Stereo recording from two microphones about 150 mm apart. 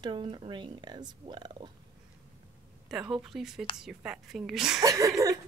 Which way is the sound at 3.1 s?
Centre (ahead or behind).